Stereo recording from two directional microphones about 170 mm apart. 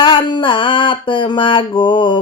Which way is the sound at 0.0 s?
30° left (ahead or behind).